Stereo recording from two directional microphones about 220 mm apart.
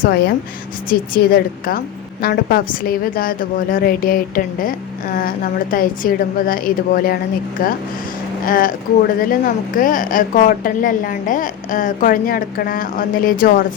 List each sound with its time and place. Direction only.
0.0 s a woman's voice: 45° left (ahead or behind)